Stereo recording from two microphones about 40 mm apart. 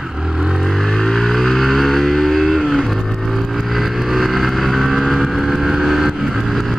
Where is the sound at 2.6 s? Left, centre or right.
Centre.